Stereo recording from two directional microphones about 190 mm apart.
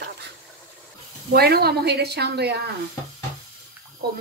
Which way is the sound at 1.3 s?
55° right (ahead or behind).